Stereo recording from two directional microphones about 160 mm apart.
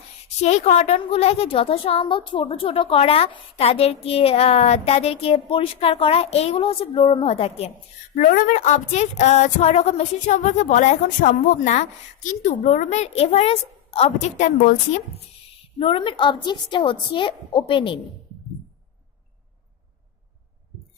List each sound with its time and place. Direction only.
0.4 s a woman's voice: 45° left (ahead or behind)
8.1 s a woman's voice: 55° left (ahead or behind)
15.8 s a woman's voice: 35° left (ahead or behind)